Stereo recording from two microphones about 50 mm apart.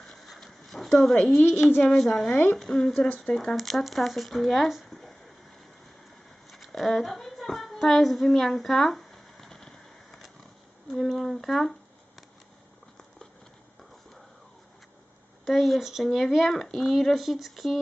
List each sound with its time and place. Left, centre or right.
0.1 s horse: centre
0.9 s speech: centre
2.3 s speech: left
2.6 s speech: centre
6.5 s a sound: centre
10.9 s speech: centre
15.4 s speech: centre